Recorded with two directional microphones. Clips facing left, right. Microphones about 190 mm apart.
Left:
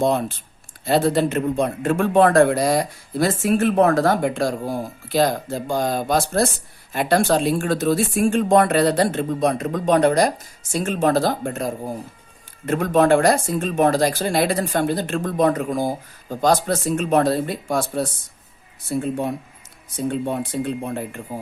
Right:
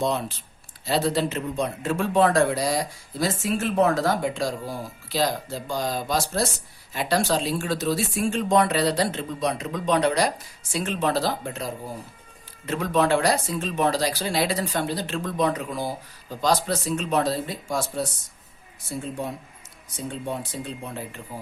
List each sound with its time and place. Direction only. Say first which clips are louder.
0.0 s speech: left 6 dB; 50° left (ahead or behind)